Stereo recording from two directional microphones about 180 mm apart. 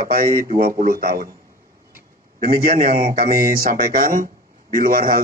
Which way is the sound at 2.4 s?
55° right (ahead or behind).